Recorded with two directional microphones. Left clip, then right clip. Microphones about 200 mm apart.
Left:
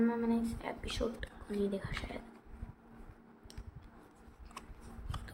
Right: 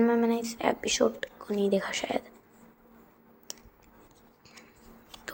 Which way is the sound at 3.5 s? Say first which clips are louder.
Right 13 dB; 40° right (ahead or behind).